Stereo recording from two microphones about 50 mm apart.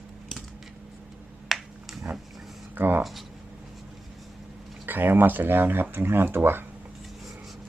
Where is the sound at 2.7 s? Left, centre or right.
Right.